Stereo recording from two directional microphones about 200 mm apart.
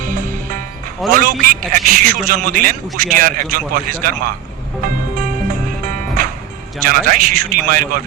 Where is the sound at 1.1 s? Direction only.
45° right (ahead or behind).